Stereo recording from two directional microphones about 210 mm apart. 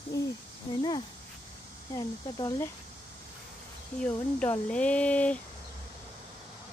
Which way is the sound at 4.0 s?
5° left (ahead or behind).